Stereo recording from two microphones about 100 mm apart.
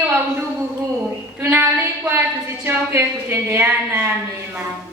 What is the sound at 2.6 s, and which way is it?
A woman's voice, 25° right (ahead or behind).